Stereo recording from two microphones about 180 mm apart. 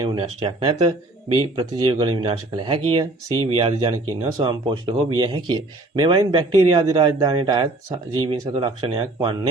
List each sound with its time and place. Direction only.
0.0 s speech: 25° right (ahead or behind)